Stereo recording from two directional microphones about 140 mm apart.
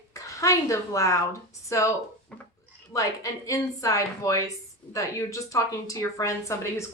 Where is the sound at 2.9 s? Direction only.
25° left (ahead or behind).